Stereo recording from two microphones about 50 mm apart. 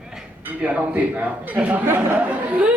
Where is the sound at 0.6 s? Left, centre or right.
Right.